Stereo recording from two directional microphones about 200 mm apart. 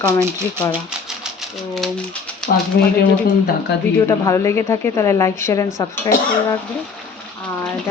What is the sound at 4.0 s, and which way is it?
Speech, 15° left (ahead or behind).